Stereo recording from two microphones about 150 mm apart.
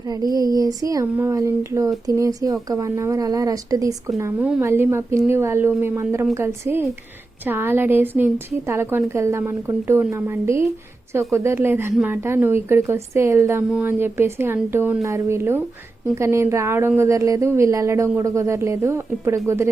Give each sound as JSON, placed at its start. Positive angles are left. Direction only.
{"t": 0.1, "sound": "a woman's voice", "side_deg": -25}